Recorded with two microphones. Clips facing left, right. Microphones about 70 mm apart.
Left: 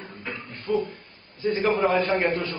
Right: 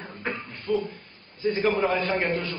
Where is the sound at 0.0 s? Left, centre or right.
Right.